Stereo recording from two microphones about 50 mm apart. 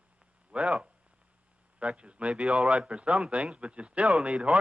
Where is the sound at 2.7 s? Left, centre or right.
Right.